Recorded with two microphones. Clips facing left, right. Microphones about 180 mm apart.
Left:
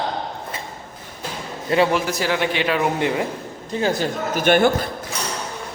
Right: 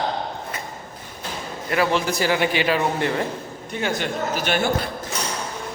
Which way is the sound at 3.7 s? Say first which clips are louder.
Left 4 dB; 35° left (ahead or behind).